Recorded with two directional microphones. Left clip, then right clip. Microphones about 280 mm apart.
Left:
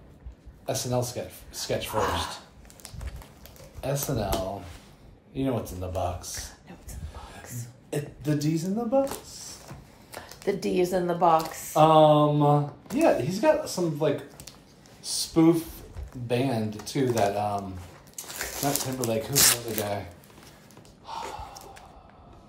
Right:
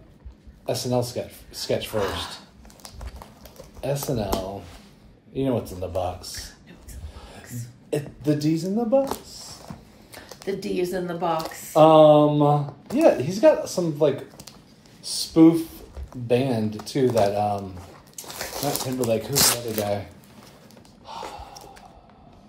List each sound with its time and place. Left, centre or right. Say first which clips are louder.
0.7 s speech: right 4 dB; centre
3.8 s speech: right 3 dB; centre
5.3 s speech: right 4 dB; centre
7.9 s speech: right 5 dB; centre
10.1 s speech: left 1 dB; left
11.7 s speech: right 5 dB; centre
15.0 s a sound: right 4 dB; centre
16.3 s speech: right 5 dB; centre
21.1 s gasp: even; centre